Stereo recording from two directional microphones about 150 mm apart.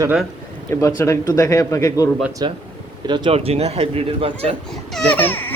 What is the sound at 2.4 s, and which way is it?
Speech, 30° right (ahead or behind).